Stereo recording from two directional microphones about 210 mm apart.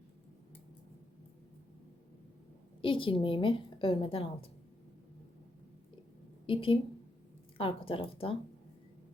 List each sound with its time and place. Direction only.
2.8 s a woman's voice: 25° left (ahead or behind)
6.4 s a woman's voice: 25° left (ahead or behind)